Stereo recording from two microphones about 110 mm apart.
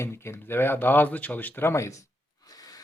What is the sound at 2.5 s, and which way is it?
Gasp, 35° left (ahead or behind).